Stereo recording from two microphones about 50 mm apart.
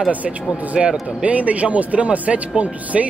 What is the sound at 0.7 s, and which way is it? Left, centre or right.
Speech, right.